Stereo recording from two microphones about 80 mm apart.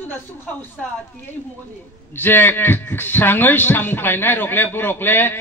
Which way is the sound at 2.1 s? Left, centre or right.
Left.